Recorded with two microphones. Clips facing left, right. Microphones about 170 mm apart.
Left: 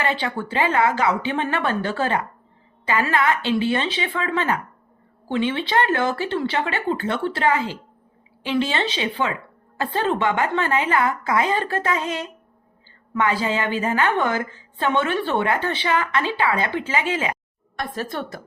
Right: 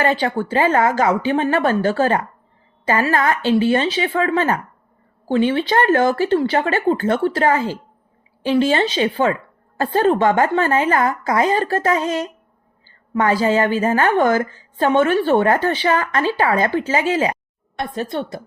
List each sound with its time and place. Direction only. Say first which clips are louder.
0.0 s a woman's voice: right 6 dB; 40° right (ahead or behind)
17.7 s speech: right 4 dB; 25° right (ahead or behind)